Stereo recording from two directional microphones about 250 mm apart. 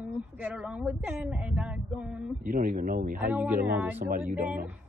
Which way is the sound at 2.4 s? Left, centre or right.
Right.